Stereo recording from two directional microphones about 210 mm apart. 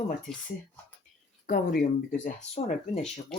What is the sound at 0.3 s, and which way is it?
Speech, 5° left (ahead or behind).